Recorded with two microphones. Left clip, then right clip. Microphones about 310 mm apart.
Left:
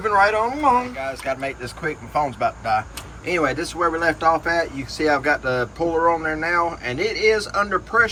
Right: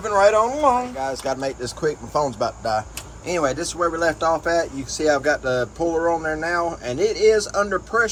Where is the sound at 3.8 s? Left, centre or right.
Centre.